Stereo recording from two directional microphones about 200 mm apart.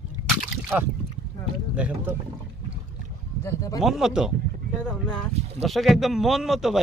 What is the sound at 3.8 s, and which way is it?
Speech, centre (ahead or behind).